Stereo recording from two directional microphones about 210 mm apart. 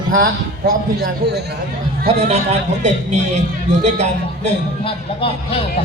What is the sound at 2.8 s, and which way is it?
Speech, 35° right (ahead or behind).